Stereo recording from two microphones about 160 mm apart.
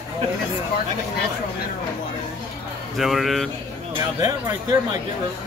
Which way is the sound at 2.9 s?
Centre (ahead or behind).